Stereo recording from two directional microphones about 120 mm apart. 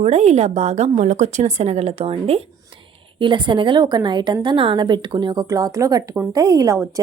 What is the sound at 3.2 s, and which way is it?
A woman's voice, 40° right (ahead or behind).